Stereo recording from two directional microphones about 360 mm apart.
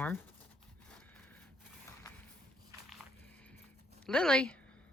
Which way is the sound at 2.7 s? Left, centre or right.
Centre.